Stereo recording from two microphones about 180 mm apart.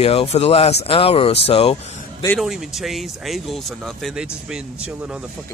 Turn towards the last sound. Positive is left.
turn(degrees=-5)  # may be behind; listen again after turning